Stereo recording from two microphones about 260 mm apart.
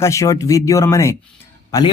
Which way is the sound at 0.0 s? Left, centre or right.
Centre.